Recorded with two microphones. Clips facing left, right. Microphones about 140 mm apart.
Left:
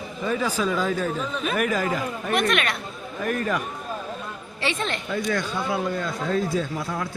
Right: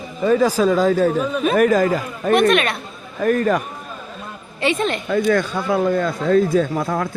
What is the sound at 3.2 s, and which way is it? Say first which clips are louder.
Speech: right 8 dB; 45° right (ahead or behind).